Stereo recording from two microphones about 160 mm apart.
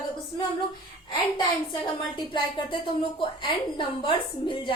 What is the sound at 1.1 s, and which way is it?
A woman's voice, 30° left (ahead or behind).